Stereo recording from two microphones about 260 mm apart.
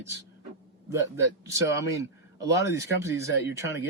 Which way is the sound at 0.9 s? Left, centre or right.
Centre.